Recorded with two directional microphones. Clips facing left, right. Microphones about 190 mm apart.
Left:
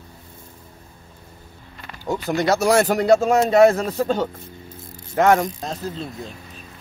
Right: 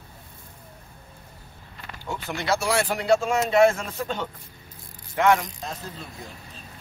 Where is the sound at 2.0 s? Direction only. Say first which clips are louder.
Left 7 dB; 40° left (ahead or behind).